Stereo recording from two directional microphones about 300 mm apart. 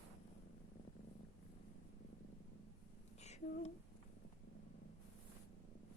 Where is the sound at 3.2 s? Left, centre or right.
Left.